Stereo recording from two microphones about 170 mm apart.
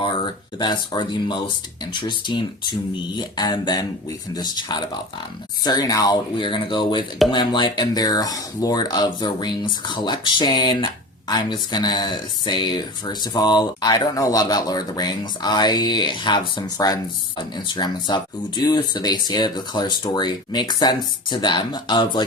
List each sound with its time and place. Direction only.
0.6 s speech: 25° left (ahead or behind)